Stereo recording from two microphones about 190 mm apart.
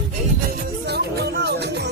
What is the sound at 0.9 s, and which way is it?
Music, 60° right (ahead or behind).